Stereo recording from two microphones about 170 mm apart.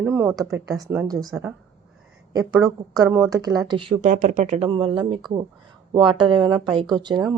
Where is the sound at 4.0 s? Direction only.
50° right (ahead or behind).